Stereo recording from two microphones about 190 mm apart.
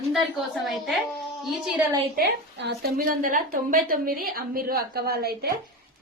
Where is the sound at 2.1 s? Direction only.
65° right (ahead or behind).